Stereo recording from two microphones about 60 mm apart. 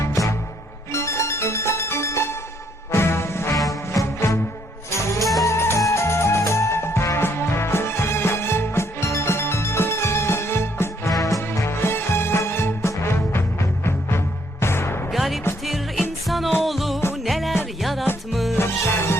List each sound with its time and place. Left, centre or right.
0.9 s music: left
3.7 s music: left
4.9 s music: left
11.1 s music: left
11.5 s music: left
15.1 s music: centre
18.5 s music: left